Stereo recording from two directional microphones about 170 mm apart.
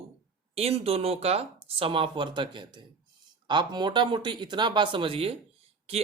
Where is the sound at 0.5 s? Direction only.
35° right (ahead or behind).